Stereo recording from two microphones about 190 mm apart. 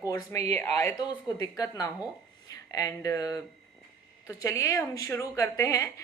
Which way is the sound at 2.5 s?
20° left (ahead or behind).